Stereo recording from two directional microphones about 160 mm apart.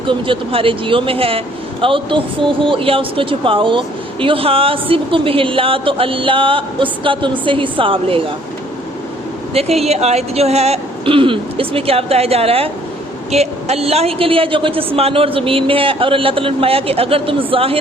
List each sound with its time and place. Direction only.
0.1 s speech: 35° right (ahead or behind)
9.6 s speech: 40° right (ahead or behind)